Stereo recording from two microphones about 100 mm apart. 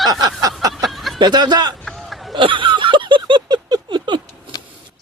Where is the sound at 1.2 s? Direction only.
45° right (ahead or behind).